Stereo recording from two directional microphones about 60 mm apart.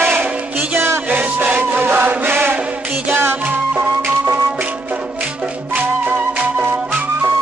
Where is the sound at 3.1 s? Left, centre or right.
Right.